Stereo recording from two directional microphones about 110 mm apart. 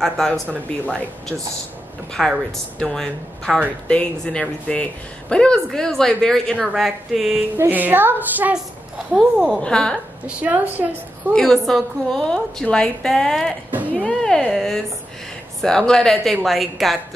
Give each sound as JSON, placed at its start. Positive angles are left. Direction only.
{"t": 2.1, "sound": "a woman's voice", "side_deg": 5}
{"t": 7.5, "sound": "a woman's voice", "side_deg": -15}
{"t": 9.6, "sound": "speech", "side_deg": 5}
{"t": 10.2, "sound": "a woman's voice", "side_deg": -15}
{"t": 11.3, "sound": "a woman's voice", "side_deg": 5}
{"t": 13.7, "sound": "a sound", "side_deg": -15}
{"t": 14.0, "sound": "music", "side_deg": 5}
{"t": 15.6, "sound": "a woman's voice", "side_deg": 5}